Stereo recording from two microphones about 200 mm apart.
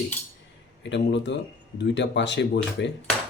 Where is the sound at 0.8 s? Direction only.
60° left (ahead or behind).